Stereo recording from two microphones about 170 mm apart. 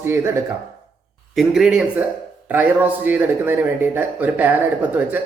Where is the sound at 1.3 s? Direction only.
Centre (ahead or behind).